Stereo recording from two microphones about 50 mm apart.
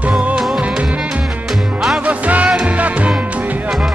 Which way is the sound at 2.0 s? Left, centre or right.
Right.